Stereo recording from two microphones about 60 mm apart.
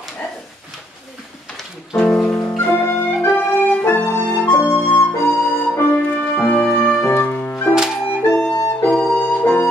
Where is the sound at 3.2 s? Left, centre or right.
Left.